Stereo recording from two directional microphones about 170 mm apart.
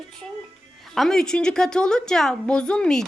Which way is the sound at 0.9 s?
Centre (ahead or behind).